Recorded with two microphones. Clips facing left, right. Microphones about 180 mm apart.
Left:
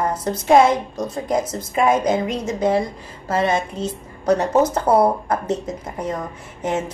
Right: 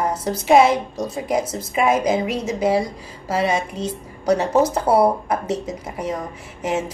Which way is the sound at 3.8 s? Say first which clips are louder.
Even; 10° right (ahead or behind).